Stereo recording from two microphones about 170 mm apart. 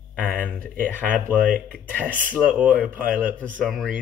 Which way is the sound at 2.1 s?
10° right (ahead or behind).